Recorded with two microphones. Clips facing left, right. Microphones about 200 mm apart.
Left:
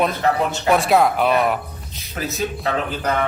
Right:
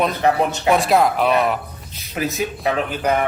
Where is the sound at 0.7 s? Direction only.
Centre (ahead or behind).